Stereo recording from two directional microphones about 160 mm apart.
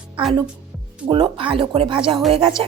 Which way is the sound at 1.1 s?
35° right (ahead or behind).